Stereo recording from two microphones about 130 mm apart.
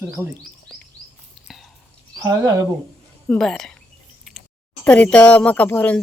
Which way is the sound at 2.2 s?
30° right (ahead or behind).